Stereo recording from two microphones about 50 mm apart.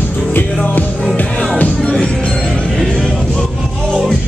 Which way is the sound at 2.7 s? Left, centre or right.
Centre.